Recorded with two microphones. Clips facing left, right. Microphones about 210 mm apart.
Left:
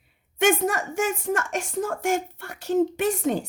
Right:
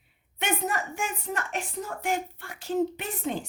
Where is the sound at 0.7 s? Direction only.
80° left.